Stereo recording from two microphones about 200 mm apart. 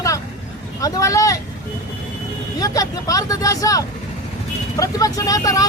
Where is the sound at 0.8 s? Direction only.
15° left (ahead or behind).